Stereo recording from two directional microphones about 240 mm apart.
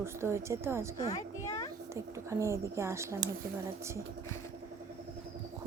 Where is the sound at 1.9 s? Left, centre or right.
Centre.